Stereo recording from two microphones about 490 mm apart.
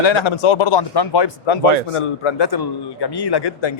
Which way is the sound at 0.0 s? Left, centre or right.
Left.